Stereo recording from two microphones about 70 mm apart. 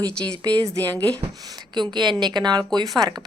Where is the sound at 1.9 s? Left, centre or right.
Right.